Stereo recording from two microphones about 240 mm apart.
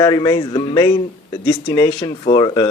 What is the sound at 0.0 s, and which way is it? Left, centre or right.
Speech, centre.